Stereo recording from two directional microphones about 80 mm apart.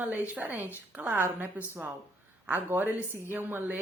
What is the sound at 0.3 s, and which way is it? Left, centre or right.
Speech, right.